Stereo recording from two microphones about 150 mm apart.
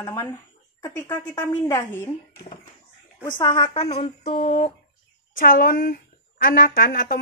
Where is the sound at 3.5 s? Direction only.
35° left (ahead or behind).